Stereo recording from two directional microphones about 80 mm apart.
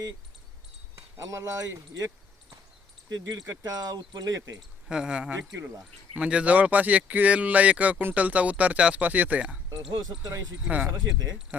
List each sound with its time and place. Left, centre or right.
0.9 s speech: right
3.1 s speech: right
4.9 s speech: centre
10.0 s speech: right